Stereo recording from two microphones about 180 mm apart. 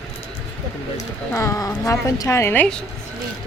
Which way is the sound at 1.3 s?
15° left (ahead or behind).